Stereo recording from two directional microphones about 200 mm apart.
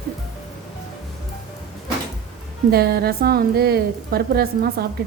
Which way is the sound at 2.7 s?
50° right (ahead or behind).